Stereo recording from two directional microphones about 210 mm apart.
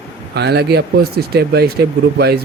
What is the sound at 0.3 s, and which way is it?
Speech, 50° right (ahead or behind).